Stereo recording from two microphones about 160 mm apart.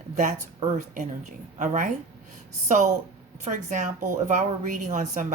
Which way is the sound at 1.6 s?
50° right (ahead or behind).